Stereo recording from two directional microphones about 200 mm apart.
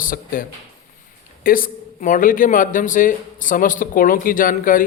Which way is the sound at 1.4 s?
45° left (ahead or behind).